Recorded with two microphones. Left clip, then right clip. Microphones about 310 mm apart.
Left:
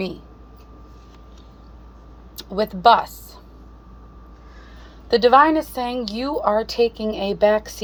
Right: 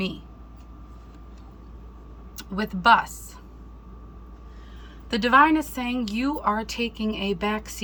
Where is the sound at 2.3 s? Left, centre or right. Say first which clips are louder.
Left 8 dB; centre.